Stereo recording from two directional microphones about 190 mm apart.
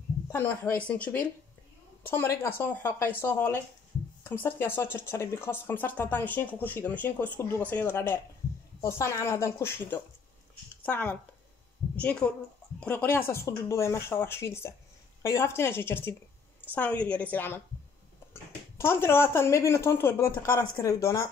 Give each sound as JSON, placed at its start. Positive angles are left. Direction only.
{"t": 0.3, "sound": "speech", "side_deg": 10}